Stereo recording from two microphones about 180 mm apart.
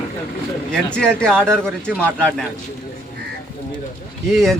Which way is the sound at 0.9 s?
5° left (ahead or behind).